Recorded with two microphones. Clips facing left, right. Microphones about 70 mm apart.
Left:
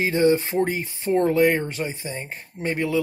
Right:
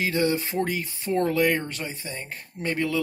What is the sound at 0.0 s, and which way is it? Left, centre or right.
Speech, left.